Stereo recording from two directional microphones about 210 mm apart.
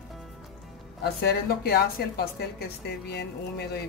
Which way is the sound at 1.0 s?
50° left (ahead or behind).